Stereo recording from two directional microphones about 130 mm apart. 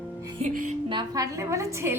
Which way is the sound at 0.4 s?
90° right.